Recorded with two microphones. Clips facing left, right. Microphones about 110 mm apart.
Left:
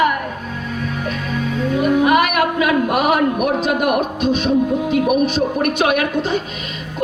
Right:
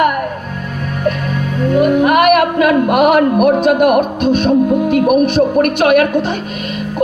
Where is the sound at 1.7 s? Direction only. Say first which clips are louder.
Right 4 dB; 55° right (ahead or behind).